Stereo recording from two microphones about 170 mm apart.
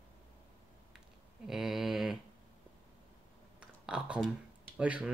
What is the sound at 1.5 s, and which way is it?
Speech, centre (ahead or behind).